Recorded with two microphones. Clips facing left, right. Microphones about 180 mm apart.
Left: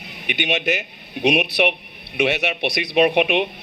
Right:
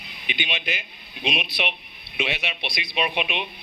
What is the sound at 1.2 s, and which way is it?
Speech, 70° left (ahead or behind).